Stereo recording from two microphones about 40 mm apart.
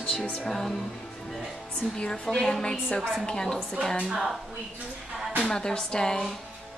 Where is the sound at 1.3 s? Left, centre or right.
Centre.